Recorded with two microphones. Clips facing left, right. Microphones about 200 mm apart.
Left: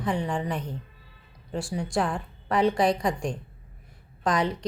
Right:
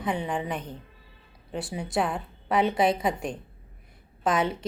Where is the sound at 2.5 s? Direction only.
5° right (ahead or behind).